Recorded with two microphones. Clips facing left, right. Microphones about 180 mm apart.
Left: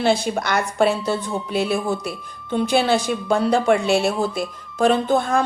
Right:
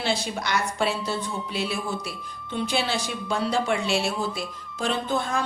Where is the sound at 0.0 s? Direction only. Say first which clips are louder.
Left 8 dB; 50° left (ahead or behind).